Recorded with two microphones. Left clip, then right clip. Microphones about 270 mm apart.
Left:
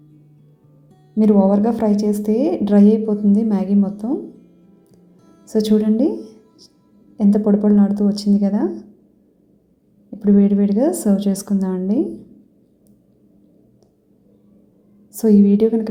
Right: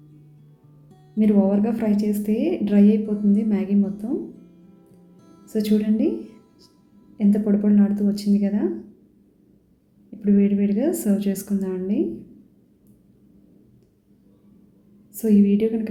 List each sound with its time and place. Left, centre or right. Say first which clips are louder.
1.2 s speech: left 5 dB; left
4.4 s music: left 1 dB; centre
5.5 s speech: left 6 dB; left
7.2 s speech: left 5 dB; centre
10.2 s speech: left 5 dB; centre
15.2 s speech: left 5 dB; left